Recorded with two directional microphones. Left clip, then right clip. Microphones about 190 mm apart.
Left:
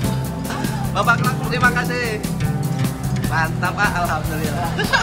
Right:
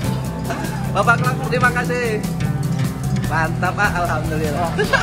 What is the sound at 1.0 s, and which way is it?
Speech, 5° left (ahead or behind).